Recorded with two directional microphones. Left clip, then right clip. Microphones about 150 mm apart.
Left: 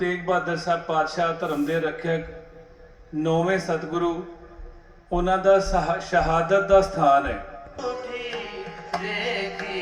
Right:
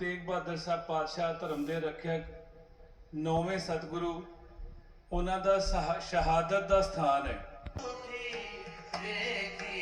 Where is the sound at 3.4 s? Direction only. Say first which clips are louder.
Left 12 dB; 20° right (ahead or behind).